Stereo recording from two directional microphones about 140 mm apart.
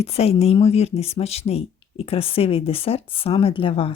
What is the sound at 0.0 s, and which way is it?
Speech, 45° left (ahead or behind).